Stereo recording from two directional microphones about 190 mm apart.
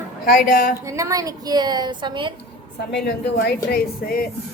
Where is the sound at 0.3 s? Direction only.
45° left (ahead or behind).